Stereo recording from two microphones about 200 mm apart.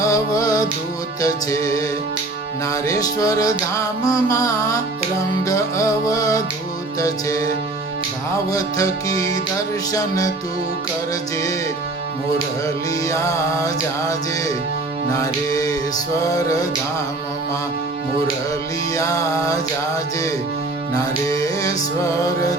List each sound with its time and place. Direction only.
0.0 s music: 15° left (ahead or behind)
2.8 s music: 15° left (ahead or behind)
8.4 s music: 15° left (ahead or behind)
12.6 s music: 15° left (ahead or behind)
18.9 s music: 15° left (ahead or behind)
20.9 s music: 15° left (ahead or behind)